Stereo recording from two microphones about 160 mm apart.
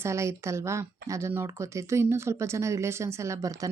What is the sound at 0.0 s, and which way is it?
A woman's voice, 20° right (ahead or behind).